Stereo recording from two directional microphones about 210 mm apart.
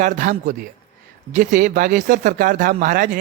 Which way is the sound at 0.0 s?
40° right (ahead or behind).